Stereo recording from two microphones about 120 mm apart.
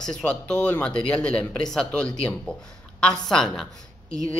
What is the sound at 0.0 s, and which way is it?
Speech, 5° left (ahead or behind).